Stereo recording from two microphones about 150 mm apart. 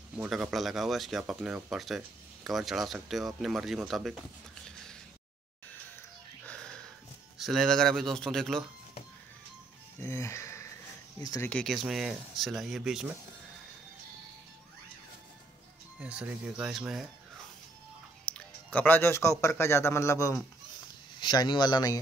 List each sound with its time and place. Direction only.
0.3 s speech: centre (ahead or behind)
6.4 s music: 5° left (ahead or behind)
7.3 s speech: centre (ahead or behind)
9.9 s speech: 15° left (ahead or behind)
11.4 s speech: 5° left (ahead or behind)
16.0 s speech: 5° right (ahead or behind)
18.2 s music: 10° left (ahead or behind)
19.4 s speech: 15° left (ahead or behind)
21.2 s speech: 30° left (ahead or behind)